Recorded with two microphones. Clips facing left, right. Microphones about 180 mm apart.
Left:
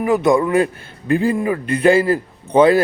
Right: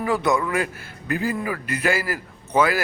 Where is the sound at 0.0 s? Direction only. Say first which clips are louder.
Left 7 dB; 25° left (ahead or behind).